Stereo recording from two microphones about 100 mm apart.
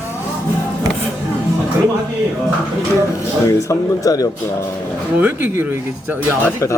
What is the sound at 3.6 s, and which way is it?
Speech, 35° left (ahead or behind).